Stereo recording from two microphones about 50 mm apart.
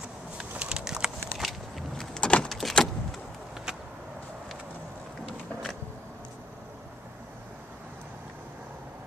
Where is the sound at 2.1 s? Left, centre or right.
Left.